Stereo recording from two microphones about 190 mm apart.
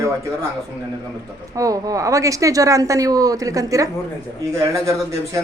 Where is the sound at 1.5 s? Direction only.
20° right (ahead or behind).